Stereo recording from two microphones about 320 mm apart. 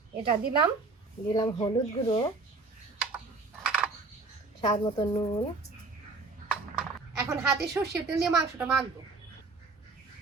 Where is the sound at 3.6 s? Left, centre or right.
Centre.